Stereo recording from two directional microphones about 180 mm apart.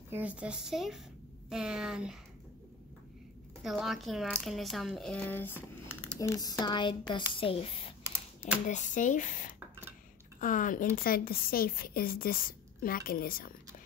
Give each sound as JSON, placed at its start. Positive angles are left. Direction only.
{"t": 0.1, "sound": "a woman's voice", "side_deg": -10}
{"t": 3.6, "sound": "speech", "side_deg": 0}
{"t": 8.6, "sound": "a woman's voice", "side_deg": 45}